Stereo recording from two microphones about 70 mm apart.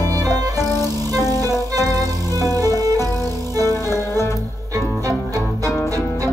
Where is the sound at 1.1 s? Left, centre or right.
Left.